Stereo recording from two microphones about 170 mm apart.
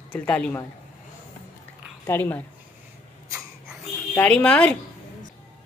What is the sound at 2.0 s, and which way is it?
Speech, 10° left (ahead or behind).